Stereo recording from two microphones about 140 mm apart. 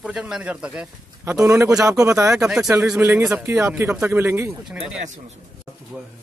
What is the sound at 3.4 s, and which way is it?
Speech, 20° right (ahead or behind).